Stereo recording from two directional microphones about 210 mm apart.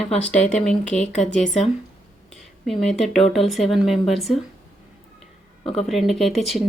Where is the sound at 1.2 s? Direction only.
35° left (ahead or behind).